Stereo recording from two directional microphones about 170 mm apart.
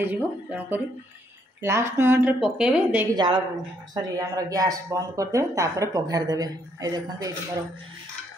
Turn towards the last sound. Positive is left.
turn(degrees=-20)  # may be behind; listen again after turning